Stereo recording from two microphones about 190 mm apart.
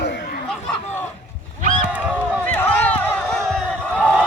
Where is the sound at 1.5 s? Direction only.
40° right (ahead or behind).